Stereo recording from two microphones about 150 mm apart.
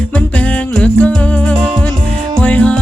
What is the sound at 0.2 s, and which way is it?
Music, 10° left (ahead or behind).